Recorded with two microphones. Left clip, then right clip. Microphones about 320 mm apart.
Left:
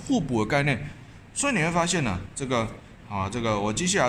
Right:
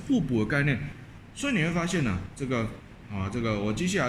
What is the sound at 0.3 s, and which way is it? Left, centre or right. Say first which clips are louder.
Speech: left 6 dB; centre.